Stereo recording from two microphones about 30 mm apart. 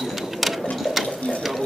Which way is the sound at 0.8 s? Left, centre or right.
Centre.